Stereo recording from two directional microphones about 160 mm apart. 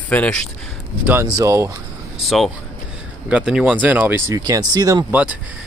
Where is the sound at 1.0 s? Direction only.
20° right (ahead or behind).